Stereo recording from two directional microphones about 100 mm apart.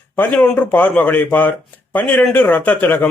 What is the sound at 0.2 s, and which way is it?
A man's voice, 15° left (ahead or behind).